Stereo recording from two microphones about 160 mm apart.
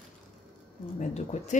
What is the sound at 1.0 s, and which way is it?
Speech, 45° left (ahead or behind).